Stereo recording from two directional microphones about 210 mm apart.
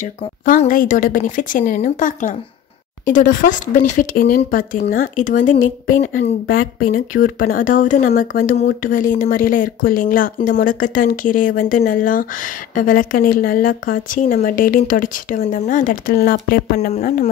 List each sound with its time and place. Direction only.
0.5 s speech: 40° left (ahead or behind)